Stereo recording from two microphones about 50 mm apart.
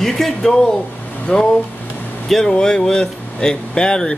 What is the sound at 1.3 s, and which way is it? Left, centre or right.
Speech, left.